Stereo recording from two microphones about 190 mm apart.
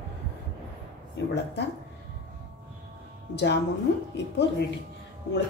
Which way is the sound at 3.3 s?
65° left (ahead or behind).